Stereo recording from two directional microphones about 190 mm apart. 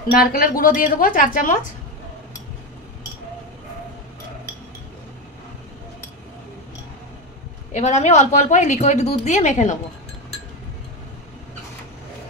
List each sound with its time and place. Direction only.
0.2 s speech: 50° left (ahead or behind)
7.7 s a woman's voice: 40° left (ahead or behind)